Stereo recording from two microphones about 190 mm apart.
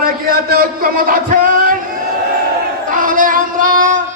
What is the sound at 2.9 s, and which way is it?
Child singing, 45° right (ahead or behind).